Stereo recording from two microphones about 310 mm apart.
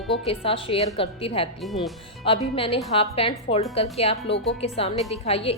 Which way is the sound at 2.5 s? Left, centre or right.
Centre.